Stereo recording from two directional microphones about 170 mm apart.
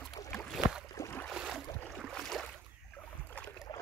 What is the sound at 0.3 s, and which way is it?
Boat, 5° left (ahead or behind).